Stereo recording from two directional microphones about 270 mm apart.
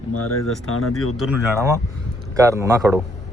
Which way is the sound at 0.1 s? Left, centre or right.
Left.